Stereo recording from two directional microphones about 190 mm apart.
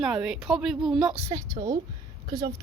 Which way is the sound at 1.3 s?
20° right (ahead or behind).